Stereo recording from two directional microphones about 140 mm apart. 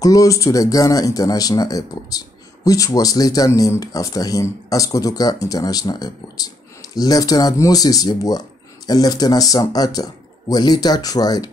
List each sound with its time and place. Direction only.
0.0 s speech: 25° left (ahead or behind)